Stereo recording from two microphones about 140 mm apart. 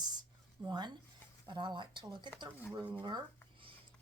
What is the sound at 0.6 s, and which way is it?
Speech, 30° right (ahead or behind).